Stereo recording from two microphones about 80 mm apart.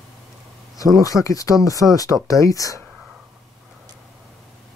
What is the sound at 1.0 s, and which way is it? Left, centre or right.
Speech, left.